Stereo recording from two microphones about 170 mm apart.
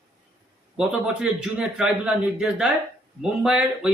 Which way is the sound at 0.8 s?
5° right (ahead or behind).